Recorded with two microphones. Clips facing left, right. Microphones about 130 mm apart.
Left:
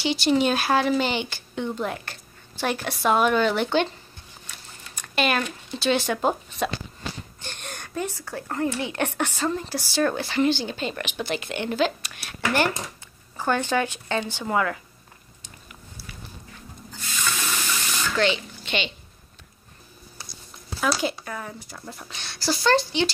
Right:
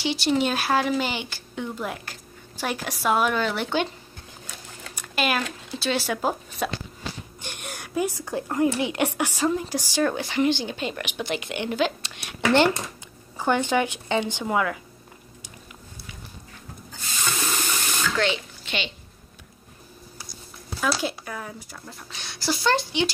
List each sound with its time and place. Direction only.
0.0 s speech: centre (ahead or behind)
4.9 s a woman's voice: 5° right (ahead or behind)
17.2 s water: 30° right (ahead or behind)
18.1 s a sound: centre (ahead or behind)
20.8 s speech: 5° right (ahead or behind)